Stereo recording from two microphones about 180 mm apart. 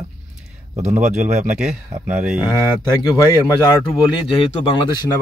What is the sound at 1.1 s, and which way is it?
Speech, 5° right (ahead or behind).